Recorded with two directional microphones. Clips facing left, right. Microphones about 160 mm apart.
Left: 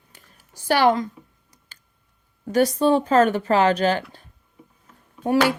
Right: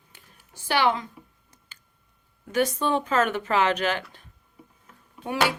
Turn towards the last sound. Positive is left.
turn(degrees=45)  # may be behind; listen again after turning